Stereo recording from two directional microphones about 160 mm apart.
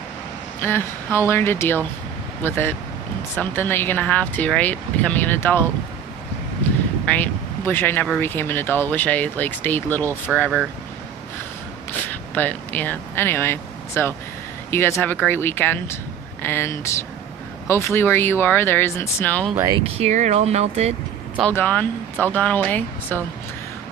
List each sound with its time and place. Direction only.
0.6 s speech: 15° left (ahead or behind)
7.0 s speech: 10° left (ahead or behind)
12.0 s speech: 10° left (ahead or behind)
19.5 s speech: 25° right (ahead or behind)
19.8 s speech: 45° right (ahead or behind)
21.4 s speech: 10° left (ahead or behind)